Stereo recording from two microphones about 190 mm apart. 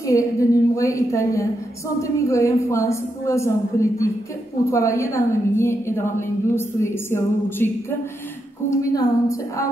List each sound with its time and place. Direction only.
0.0 s a woman's voice: 15° left (ahead or behind)
4.6 s a woman's voice: 15° left (ahead or behind)